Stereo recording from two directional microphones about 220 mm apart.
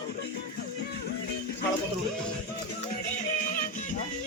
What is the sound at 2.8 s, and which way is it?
Music, 35° left (ahead or behind).